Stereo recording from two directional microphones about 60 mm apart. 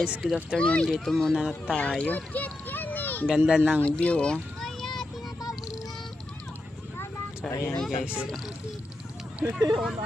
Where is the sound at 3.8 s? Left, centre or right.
Left.